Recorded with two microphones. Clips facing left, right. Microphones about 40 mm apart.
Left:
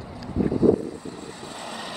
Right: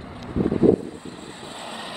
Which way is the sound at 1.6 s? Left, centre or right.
Centre.